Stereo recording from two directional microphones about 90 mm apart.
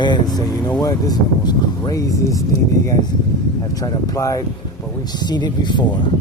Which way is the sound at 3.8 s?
40° left (ahead or behind).